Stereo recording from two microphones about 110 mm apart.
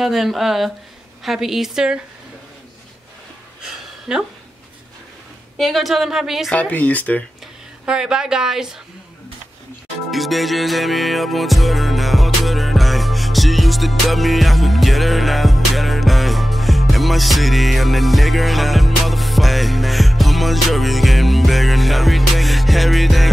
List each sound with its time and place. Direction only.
0.0 s speech: centre (ahead or behind)
3.6 s a sound: 5° right (ahead or behind)
5.6 s speech: centre (ahead or behind)
6.5 s speech: 10° left (ahead or behind)
7.8 s speech: 5° right (ahead or behind)
10.1 s music: centre (ahead or behind)